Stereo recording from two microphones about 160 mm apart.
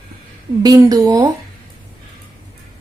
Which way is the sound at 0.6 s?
25° right (ahead or behind).